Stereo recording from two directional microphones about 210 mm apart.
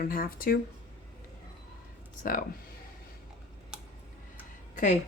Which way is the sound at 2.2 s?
40° left (ahead or behind).